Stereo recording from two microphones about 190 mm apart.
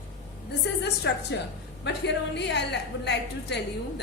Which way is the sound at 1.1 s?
65° left (ahead or behind).